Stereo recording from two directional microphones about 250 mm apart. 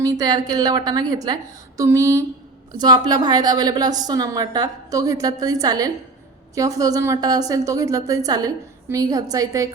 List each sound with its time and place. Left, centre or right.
0.0 s a woman's voice: centre